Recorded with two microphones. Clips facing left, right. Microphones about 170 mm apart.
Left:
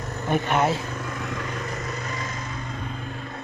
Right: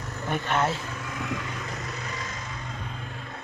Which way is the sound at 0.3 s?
15° left (ahead or behind).